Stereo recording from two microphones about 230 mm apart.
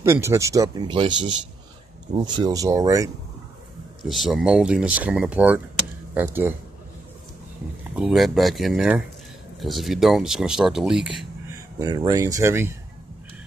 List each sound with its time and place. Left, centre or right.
0.0 s speech: centre
4.0 s speech: centre
7.9 s speech: centre
11.8 s speech: centre